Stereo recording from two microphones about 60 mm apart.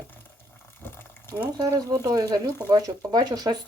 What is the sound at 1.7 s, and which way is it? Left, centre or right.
Speech, right.